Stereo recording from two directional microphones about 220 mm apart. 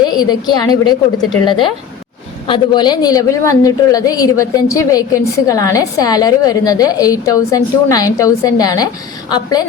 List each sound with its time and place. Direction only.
0.0 s a woman's voice: 20° left (ahead or behind)